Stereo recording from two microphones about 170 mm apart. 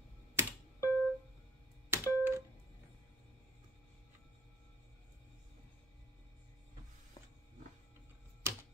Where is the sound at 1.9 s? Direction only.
15° right (ahead or behind).